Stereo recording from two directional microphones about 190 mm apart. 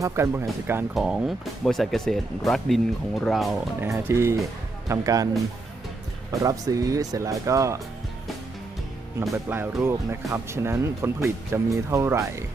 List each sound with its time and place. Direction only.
0.0 s speech: 15° right (ahead or behind)
0.9 s speech: centre (ahead or behind)
3.8 s speech: 15° right (ahead or behind)
6.4 s speech: 15° right (ahead or behind)
9.3 s speech: 10° right (ahead or behind)